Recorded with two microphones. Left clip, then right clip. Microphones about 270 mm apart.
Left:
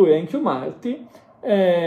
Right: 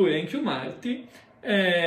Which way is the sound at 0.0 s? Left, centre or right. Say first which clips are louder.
Left 8 dB; centre.